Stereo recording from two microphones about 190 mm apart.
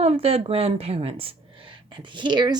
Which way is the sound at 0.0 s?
30° right (ahead or behind).